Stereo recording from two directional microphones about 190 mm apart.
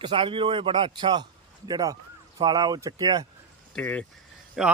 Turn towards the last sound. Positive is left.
turn(degrees=0)  # may be behind; listen again after turning